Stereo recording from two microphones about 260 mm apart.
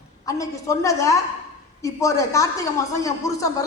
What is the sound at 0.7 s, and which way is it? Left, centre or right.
A woman's voice, centre.